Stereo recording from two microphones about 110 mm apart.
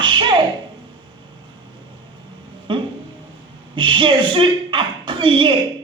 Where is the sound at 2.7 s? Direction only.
50° right (ahead or behind).